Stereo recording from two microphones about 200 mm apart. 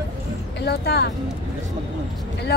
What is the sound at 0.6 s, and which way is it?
Speech, 55° left (ahead or behind).